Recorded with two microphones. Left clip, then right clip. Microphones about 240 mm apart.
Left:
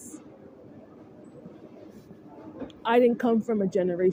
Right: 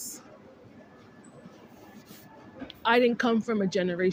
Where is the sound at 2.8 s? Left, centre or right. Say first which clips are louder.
Left 1 dB; right.